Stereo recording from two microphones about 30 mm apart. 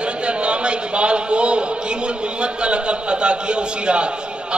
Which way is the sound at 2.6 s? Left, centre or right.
Right.